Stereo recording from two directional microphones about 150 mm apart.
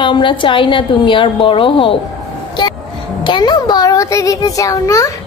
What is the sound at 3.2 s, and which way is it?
A child's voice, 30° left (ahead or behind).